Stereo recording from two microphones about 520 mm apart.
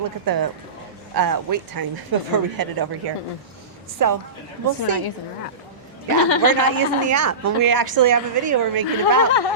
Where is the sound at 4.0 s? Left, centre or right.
Right.